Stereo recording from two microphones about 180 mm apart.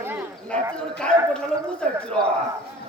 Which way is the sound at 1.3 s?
5° left (ahead or behind).